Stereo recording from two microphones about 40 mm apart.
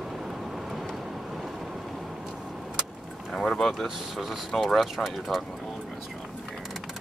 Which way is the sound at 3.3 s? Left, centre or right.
Centre.